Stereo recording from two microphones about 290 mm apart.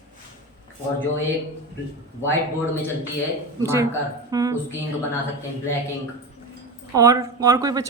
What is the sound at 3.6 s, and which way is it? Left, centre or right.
Speech, centre.